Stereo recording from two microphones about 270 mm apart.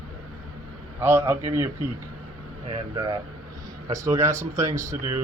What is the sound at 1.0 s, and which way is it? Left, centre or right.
Speech, centre.